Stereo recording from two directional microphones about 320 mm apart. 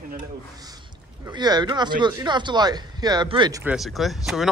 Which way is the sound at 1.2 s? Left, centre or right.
Centre.